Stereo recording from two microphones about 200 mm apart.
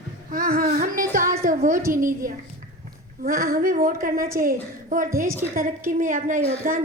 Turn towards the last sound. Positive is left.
turn(degrees=-40)  # may be behind; listen again after turning